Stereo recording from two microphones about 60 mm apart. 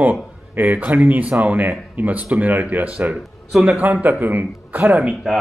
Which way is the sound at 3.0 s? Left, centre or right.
Centre.